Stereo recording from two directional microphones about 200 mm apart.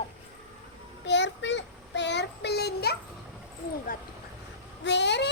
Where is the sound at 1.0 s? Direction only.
60° left (ahead or behind).